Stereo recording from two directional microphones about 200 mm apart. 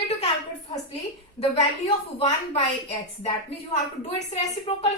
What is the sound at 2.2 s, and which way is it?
A woman's voice, 30° left (ahead or behind).